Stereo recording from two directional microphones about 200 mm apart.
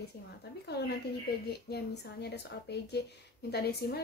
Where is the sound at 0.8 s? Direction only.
55° left (ahead or behind).